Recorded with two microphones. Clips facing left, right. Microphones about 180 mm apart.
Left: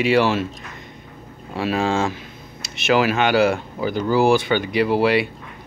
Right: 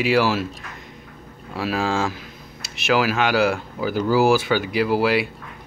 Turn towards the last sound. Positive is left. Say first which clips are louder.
# left 2 dB
turn(degrees=-5)  # may be behind; listen again after turning